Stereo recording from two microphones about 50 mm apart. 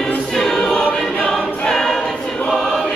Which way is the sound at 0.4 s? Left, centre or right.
Centre.